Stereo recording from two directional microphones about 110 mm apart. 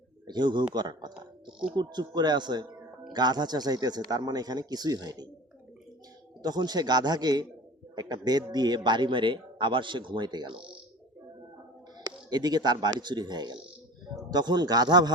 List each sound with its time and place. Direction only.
0.3 s speech: 40° right (ahead or behind)
6.4 s a man's voice: 40° right (ahead or behind)
12.0 s speech: 40° right (ahead or behind)